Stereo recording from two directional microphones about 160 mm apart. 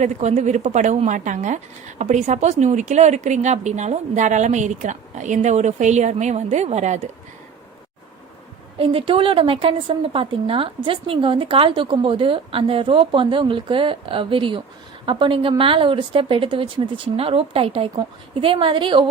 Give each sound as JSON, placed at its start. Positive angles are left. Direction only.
{"t": 0.0, "sound": "a woman's voice", "side_deg": -45}
{"t": 8.8, "sound": "speech", "side_deg": -35}